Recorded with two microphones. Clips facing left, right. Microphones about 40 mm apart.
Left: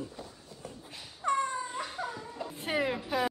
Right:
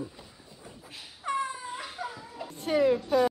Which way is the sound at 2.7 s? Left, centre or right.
Left.